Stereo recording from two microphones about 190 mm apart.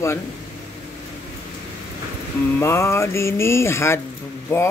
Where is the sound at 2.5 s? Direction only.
15° left (ahead or behind).